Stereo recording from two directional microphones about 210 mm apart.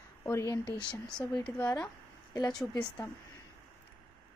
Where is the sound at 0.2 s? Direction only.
15° left (ahead or behind).